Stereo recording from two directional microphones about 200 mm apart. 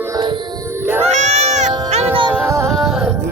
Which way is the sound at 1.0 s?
35° right (ahead or behind).